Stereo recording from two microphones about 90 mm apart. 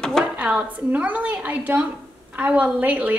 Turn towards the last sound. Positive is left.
turn(degrees=-15)  # may be behind; listen again after turning